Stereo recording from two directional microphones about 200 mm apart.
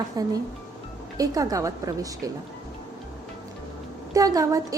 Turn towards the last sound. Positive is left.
turn(degrees=-15)  # may be behind; listen again after turning